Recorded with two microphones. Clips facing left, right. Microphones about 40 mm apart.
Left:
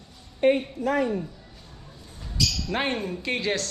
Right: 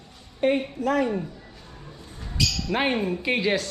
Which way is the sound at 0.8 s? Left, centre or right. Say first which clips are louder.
Right 1 dB; right.